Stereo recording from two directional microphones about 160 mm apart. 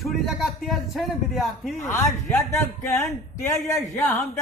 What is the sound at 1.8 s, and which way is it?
Speech, 15° left (ahead or behind).